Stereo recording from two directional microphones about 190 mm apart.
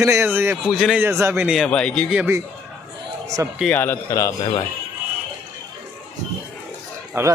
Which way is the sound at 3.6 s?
10° left (ahead or behind).